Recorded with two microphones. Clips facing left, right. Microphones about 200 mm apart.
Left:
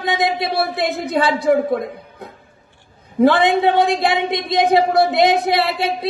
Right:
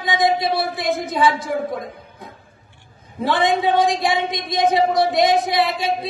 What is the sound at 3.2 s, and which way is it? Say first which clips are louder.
Speech: left 5 dB; 65° left (ahead or behind).